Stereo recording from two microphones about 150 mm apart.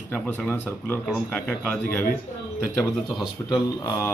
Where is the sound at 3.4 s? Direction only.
20° left (ahead or behind).